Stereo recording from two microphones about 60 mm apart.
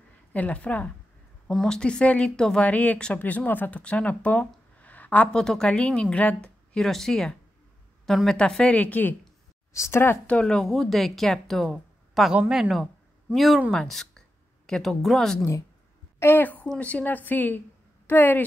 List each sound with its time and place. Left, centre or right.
0.3 s a woman's voice: left
1.5 s a woman's voice: centre
2.6 s a woman's voice: left
3.8 s speech: centre
5.3 s a woman's voice: centre
6.8 s a woman's voice: centre
8.7 s a woman's voice: left
9.7 s a sound: left
10.2 s speech: centre
11.7 s a sound: centre
12.4 s speech: centre
16.2 s a woman's voice: left